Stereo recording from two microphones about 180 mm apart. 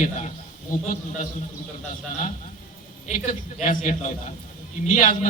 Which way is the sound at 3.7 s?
45° left (ahead or behind).